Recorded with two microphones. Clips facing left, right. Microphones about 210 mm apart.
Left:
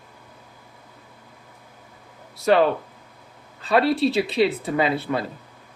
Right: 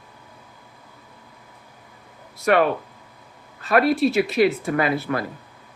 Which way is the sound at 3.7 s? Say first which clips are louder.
Right 1 dB; 30° left (ahead or behind).